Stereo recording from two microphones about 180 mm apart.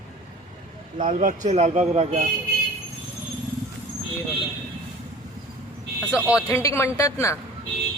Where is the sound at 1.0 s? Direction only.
45° right (ahead or behind).